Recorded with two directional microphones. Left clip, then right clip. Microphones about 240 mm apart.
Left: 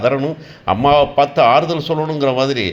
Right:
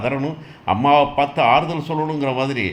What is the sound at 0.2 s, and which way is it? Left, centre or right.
A man's voice, centre.